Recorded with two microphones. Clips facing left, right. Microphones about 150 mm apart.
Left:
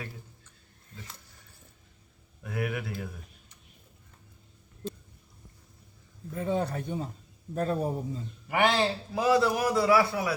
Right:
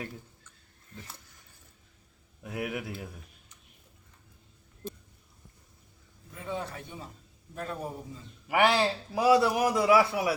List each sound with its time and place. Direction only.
2.4 s a man's voice: 15° right (ahead or behind)
6.3 s a man's voice: 45° left (ahead or behind)
8.4 s a man's voice: 10° right (ahead or behind)